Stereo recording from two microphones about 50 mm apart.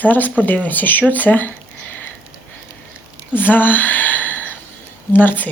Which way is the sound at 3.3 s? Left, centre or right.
Left.